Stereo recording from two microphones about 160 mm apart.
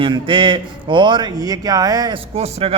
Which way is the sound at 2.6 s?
35° right (ahead or behind).